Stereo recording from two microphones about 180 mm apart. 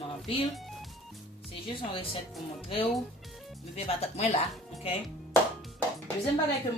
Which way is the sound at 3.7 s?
35° left (ahead or behind).